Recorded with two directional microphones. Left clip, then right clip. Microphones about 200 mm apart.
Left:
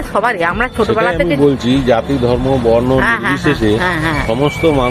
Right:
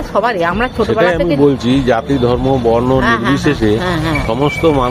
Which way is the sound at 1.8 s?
15° right (ahead or behind).